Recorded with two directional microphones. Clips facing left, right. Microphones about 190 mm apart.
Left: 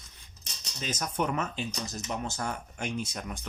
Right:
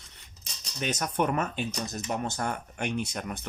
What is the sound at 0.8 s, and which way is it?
Speech, 65° right (ahead or behind).